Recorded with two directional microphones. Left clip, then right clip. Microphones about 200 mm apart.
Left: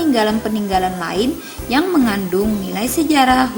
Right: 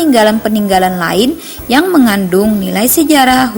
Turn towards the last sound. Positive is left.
turn(degrees=-35)  # may be behind; listen again after turning